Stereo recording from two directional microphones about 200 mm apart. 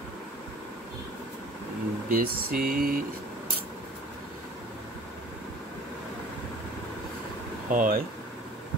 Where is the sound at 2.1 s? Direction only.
50° right (ahead or behind).